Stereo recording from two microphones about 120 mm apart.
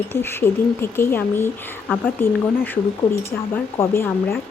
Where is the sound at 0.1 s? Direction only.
20° left (ahead or behind).